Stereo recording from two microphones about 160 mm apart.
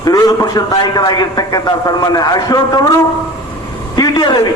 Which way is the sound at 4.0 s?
25° left (ahead or behind).